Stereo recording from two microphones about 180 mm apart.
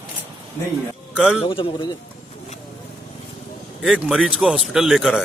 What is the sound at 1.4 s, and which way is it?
Speech, 30° left (ahead or behind).